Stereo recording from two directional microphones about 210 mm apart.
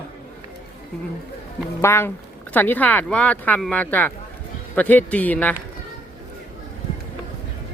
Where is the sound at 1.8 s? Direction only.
10° left (ahead or behind).